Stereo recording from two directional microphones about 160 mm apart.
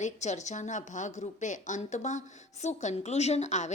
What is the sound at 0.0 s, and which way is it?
A woman's voice, 45° left (ahead or behind).